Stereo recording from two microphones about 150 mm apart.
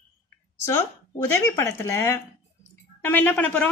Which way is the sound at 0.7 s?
15° left (ahead or behind).